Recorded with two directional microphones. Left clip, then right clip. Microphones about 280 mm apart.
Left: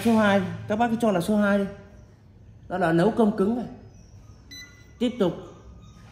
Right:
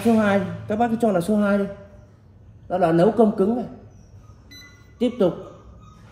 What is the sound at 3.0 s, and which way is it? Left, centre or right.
Speech, centre.